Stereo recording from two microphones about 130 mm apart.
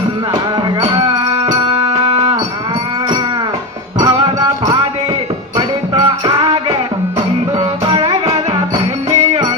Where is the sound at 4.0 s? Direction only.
30° right (ahead or behind).